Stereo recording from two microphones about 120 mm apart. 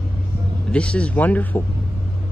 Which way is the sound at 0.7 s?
10° left (ahead or behind).